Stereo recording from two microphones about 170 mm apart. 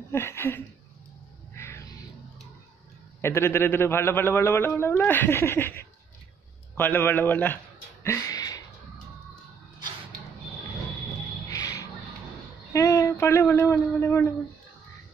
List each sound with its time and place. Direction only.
0.1 s a man's voice: 15° left (ahead or behind)
1.5 s music: 15° left (ahead or behind)
3.2 s a man's voice: 15° left (ahead or behind)
8.0 s a sound: 15° left (ahead or behind)
11.4 s music: 20° left (ahead or behind)
12.7 s speech: 20° left (ahead or behind)